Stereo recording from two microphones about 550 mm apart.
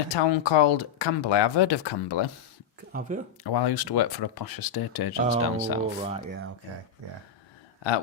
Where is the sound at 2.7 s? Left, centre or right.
Centre.